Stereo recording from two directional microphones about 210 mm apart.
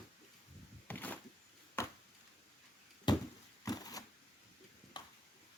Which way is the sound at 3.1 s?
20° left (ahead or behind).